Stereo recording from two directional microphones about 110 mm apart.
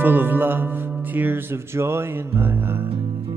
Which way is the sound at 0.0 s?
15° right (ahead or behind).